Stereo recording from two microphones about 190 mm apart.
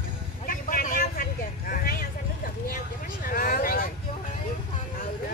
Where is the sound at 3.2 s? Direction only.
50° left (ahead or behind).